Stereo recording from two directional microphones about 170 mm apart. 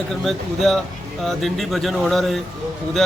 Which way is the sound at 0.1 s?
Centre (ahead or behind).